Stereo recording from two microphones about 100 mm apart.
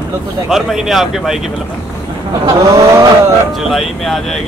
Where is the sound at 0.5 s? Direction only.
Centre (ahead or behind).